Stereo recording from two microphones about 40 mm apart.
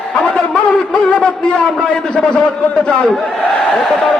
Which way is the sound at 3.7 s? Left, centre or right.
Centre.